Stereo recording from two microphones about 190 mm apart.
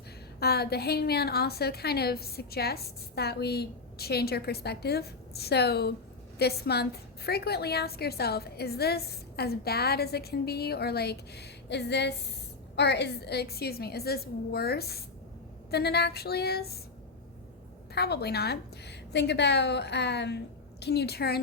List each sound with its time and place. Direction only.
0.3 s a woman's voice: 55° left (ahead or behind)
17.9 s a woman's voice: 55° left (ahead or behind)